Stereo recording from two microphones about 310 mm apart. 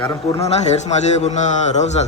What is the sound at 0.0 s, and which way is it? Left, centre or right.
A man's voice, centre.